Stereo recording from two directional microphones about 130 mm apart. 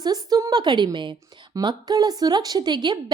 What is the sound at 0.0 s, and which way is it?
A woman's voice, 30° right (ahead or behind).